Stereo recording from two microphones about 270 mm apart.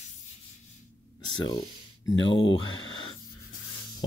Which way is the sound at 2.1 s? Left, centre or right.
Left.